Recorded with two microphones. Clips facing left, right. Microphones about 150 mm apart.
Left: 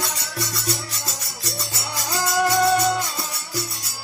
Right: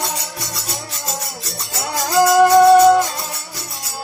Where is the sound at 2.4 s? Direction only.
55° right (ahead or behind).